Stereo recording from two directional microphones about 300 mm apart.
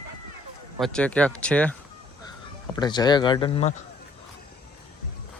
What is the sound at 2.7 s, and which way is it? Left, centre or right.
Speech, centre.